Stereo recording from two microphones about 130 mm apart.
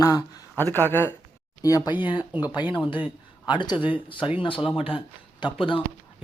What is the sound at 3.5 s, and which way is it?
A man's voice, 35° left (ahead or behind).